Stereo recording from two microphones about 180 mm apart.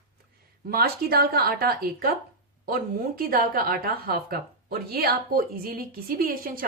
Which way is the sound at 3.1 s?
55° right (ahead or behind).